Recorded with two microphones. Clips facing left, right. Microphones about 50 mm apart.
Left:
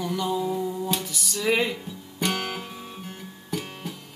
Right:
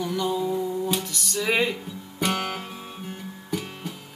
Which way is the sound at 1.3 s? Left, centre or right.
Centre.